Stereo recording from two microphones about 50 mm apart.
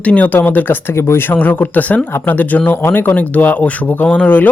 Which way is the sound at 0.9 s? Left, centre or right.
Left.